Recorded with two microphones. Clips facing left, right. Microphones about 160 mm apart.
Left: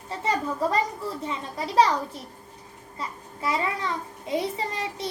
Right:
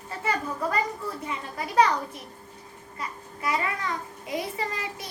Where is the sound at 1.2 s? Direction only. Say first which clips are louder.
Left 2 dB; 30° left (ahead or behind).